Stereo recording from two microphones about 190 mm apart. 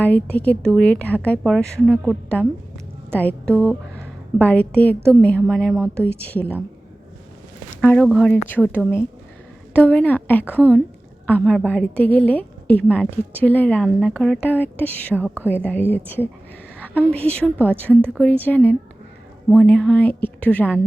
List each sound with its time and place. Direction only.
0.0 s a woman's voice: 10° left (ahead or behind)
7.8 s a woman's voice: 5° left (ahead or behind)
15.1 s speech: 10° right (ahead or behind)
15.4 s a woman's voice: 10° left (ahead or behind)
16.7 s a sound: 10° left (ahead or behind)
17.1 s a woman's voice: 5° left (ahead or behind)